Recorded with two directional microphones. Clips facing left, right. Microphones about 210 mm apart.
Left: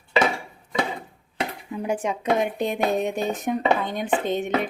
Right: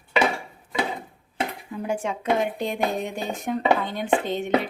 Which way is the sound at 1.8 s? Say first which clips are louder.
Left 1 dB; 15° left (ahead or behind).